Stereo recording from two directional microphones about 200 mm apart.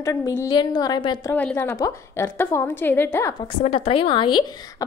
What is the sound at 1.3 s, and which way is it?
A woman's voice, 10° left (ahead or behind).